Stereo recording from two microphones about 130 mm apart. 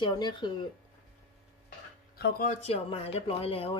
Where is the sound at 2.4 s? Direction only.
50° left (ahead or behind).